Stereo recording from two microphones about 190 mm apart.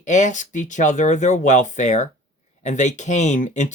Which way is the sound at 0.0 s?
40° left (ahead or behind).